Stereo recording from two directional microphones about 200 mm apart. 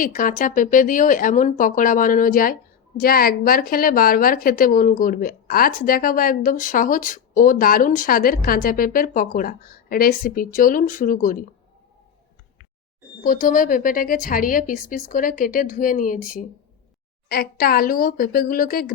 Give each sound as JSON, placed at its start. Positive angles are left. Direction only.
{"t": 0.0, "sound": "a woman's voice", "side_deg": 40}
{"t": 13.2, "sound": "a woman's voice", "side_deg": 40}